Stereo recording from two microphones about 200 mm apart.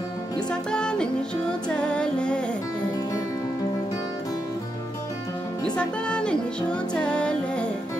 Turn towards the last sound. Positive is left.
turn(degrees=5)  # may be behind; listen again after turning